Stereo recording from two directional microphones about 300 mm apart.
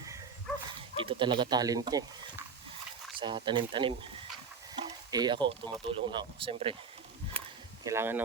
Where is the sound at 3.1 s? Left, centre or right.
Centre.